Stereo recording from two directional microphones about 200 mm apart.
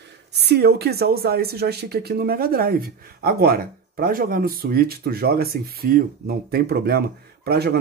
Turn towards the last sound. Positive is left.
turn(degrees=-55)  # may be behind; listen again after turning